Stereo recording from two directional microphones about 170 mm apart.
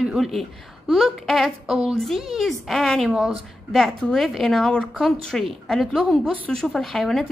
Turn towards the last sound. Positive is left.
turn(degrees=0)  # may be behind; listen again after turning